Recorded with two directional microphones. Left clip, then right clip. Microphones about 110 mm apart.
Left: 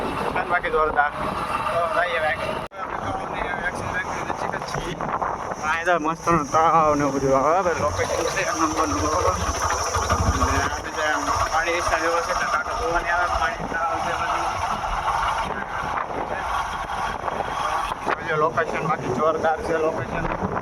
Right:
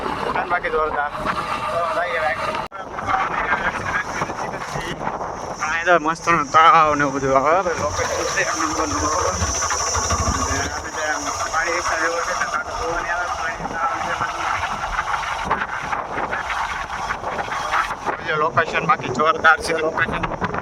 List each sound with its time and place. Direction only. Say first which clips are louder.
0.3 s a sound: even; 5° left (ahead or behind)
5.8 s speech: right 6 dB; 35° right (ahead or behind)
6.2 s speech: right 6 dB; 85° right
18.5 s speech: right 5 dB; 35° right (ahead or behind)
19.2 s speech: right 6 dB; 75° right (ahead or behind)